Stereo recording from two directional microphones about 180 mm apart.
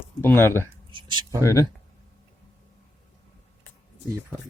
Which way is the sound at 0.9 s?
25° right (ahead or behind).